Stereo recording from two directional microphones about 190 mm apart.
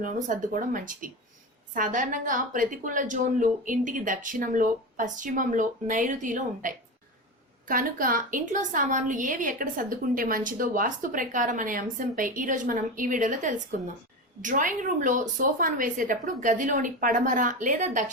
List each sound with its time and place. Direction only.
0.0 s a woman's voice: 45° right (ahead or behind)